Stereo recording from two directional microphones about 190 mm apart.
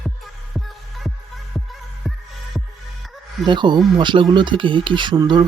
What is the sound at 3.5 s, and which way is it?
Speech, 25° right (ahead or behind).